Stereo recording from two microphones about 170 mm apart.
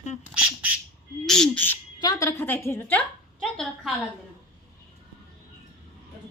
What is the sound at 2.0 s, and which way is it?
A woman's voice, 20° left (ahead or behind).